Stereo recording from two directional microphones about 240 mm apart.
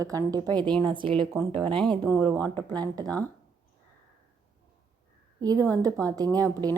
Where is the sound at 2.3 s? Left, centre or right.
Centre.